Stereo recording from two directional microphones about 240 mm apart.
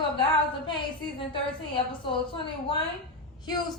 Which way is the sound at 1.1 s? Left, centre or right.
Left.